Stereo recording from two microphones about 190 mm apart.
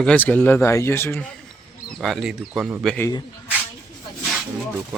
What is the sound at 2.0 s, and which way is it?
Speech, centre (ahead or behind).